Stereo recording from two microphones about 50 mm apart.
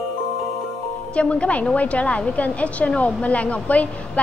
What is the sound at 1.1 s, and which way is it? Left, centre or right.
A woman's voice, left.